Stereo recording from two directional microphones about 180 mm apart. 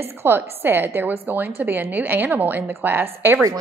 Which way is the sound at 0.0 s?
15° right (ahead or behind).